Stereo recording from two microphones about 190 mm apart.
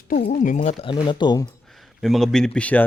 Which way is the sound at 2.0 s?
Centre (ahead or behind).